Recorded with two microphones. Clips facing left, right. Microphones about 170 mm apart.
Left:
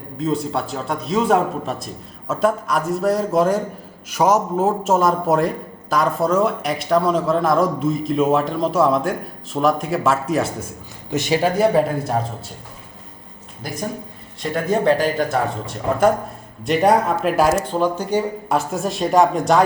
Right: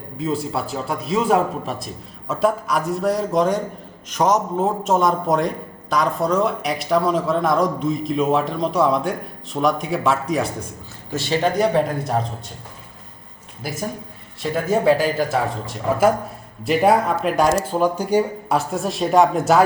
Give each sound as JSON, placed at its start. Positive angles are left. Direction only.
{"t": 0.2, "sound": "a man's voice", "side_deg": 0}
{"t": 11.1, "sound": "speech", "side_deg": 20}
{"t": 11.4, "sound": "a man's voice", "side_deg": 5}
{"t": 14.4, "sound": "a man's voice", "side_deg": -5}
{"t": 17.7, "sound": "speech", "side_deg": -10}
{"t": 18.4, "sound": "a man's voice", "side_deg": 0}